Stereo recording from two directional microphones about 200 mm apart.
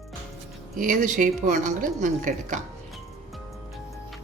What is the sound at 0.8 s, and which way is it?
Speech, 40° right (ahead or behind).